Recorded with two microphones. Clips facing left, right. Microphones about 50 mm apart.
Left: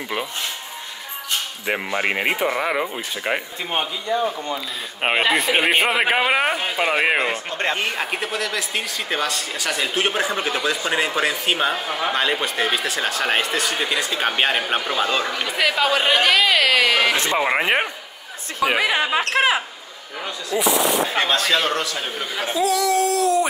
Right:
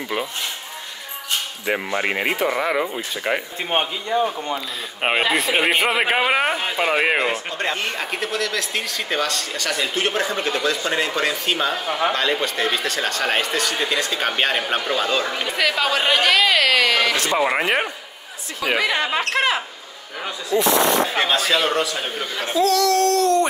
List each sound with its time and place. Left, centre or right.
1.7 s speech: centre
3.8 s a man's voice: centre
5.0 s speech: centre
7.5 s speech: left
7.8 s speech: centre
22.4 s speech: centre